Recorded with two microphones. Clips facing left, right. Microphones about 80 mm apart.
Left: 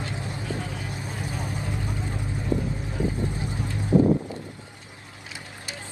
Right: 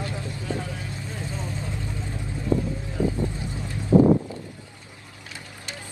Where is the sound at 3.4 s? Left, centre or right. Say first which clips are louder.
Left 2 dB; right.